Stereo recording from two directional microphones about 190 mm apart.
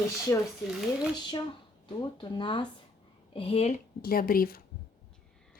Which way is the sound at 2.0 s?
25° left (ahead or behind).